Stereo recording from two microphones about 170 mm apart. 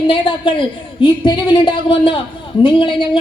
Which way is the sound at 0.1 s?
30° left (ahead or behind).